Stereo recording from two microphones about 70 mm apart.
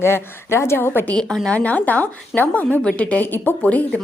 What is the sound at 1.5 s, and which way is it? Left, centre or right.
A woman's voice, left.